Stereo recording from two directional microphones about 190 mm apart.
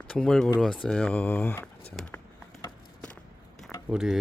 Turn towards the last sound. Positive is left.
turn(degrees=0)  # may be behind; listen again after turning